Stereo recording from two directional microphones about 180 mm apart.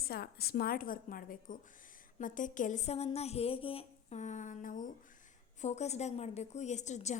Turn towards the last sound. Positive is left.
turn(degrees=40)  # may be behind; listen again after turning